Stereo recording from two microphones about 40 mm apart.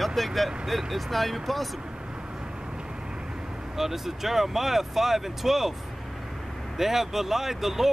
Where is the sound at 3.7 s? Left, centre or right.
Centre.